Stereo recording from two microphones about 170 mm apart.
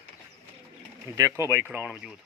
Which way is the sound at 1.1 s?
15° right (ahead or behind).